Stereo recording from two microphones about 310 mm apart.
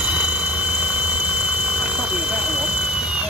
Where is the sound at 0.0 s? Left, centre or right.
Centre.